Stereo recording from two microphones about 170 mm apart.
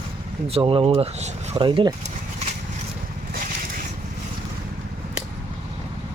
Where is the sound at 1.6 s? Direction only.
30° right (ahead or behind).